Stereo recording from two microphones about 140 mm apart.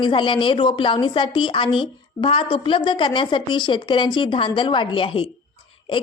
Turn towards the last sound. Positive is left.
turn(degrees=35)  # may be behind; listen again after turning